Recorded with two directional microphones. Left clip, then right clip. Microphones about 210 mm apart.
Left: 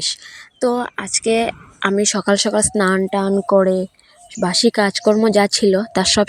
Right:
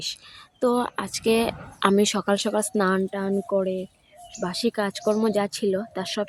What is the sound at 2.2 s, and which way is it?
Speech, 20° left (ahead or behind).